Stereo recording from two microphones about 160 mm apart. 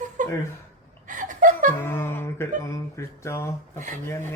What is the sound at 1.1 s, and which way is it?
Chuckle, 55° right (ahead or behind).